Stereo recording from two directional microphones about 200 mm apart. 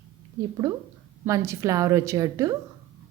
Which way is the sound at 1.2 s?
15° right (ahead or behind).